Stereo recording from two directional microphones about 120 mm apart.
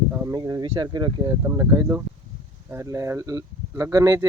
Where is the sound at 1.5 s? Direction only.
25° right (ahead or behind).